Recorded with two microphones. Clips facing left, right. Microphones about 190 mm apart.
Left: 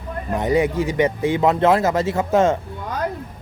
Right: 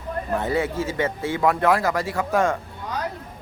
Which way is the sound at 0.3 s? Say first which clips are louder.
Left 6 dB; 15° left (ahead or behind).